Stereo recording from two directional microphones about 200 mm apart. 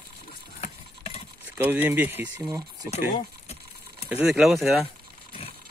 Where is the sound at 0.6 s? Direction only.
30° left (ahead or behind).